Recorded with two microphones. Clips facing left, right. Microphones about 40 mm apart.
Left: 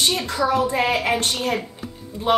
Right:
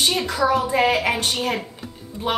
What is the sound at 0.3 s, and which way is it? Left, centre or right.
A woman's voice, centre.